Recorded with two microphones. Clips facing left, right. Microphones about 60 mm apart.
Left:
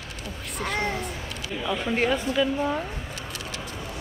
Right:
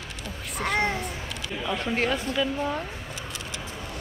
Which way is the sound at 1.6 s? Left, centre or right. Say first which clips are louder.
Left 2 dB; centre.